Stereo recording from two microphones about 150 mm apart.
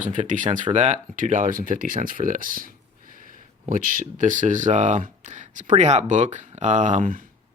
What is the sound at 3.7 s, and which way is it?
Speech, 65° right (ahead or behind).